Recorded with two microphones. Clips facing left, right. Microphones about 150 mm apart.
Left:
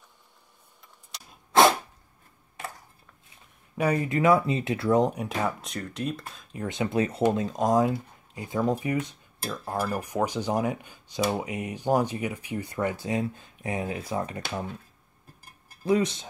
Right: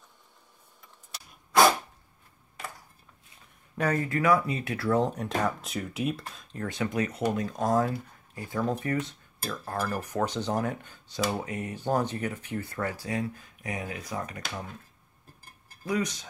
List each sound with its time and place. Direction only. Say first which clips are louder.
3.7 s speech: left 2 dB; 15° left (ahead or behind)
5.6 s speech: right 1 dB; 5° right (ahead or behind)
6.5 s speech: left 3 dB; 20° left (ahead or behind)
15.8 s speech: left 6 dB; 25° left (ahead or behind)